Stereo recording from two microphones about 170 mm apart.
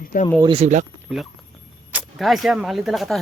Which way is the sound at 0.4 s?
35° right (ahead or behind).